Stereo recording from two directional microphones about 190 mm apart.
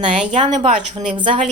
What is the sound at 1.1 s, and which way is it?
Speech, 25° right (ahead or behind).